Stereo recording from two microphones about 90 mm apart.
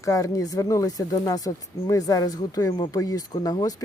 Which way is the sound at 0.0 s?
35° left (ahead or behind).